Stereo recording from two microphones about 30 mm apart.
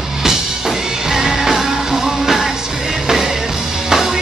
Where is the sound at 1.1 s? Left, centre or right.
Centre.